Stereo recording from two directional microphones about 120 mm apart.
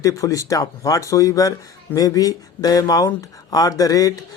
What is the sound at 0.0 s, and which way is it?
Speech, 25° left (ahead or behind).